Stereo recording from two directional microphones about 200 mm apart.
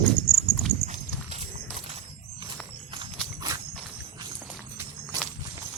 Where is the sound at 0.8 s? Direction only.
35° right (ahead or behind).